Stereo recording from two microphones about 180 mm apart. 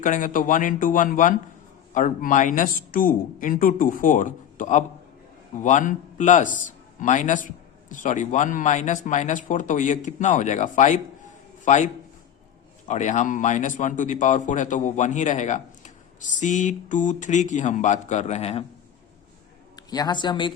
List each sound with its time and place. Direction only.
0.0 s a man's voice: 45° left (ahead or behind)
12.9 s speech: 40° left (ahead or behind)
19.7 s speech: 20° left (ahead or behind)